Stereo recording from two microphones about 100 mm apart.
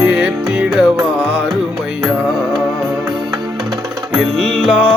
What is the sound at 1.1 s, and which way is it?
Music, 20° right (ahead or behind).